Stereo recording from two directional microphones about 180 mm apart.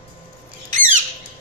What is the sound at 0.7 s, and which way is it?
Squawk, 45° right (ahead or behind).